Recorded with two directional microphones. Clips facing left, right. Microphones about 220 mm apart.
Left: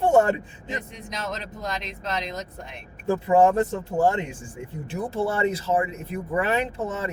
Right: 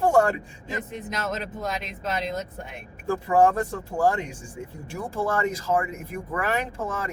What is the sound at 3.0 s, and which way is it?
Speech, 20° left (ahead or behind).